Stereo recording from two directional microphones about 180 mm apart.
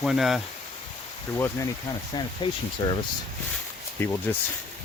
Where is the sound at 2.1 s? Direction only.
25° left (ahead or behind).